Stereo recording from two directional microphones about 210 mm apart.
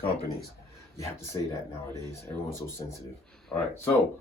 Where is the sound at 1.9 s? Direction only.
15° left (ahead or behind).